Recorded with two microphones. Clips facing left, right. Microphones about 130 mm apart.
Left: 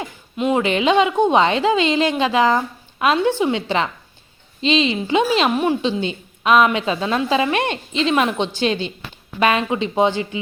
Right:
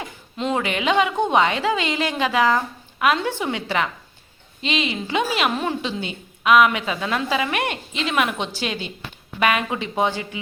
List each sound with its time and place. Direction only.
0.3 s a woman's voice: 10° left (ahead or behind)
0.6 s a woman's voice: 25° left (ahead or behind)